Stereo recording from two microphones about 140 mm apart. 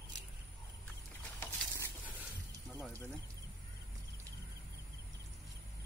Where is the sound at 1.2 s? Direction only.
15° left (ahead or behind).